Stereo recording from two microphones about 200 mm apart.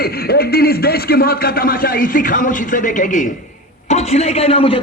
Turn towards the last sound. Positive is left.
turn(degrees=30)  # may be behind; listen again after turning